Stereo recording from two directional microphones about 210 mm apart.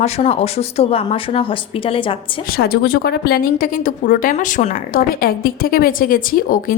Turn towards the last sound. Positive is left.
turn(degrees=40)  # may be behind; listen again after turning